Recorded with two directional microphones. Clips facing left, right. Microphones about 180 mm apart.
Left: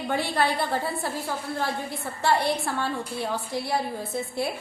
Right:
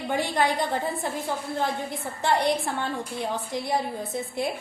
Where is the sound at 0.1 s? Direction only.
15° right (ahead or behind).